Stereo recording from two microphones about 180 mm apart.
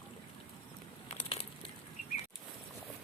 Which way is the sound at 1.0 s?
30° left (ahead or behind).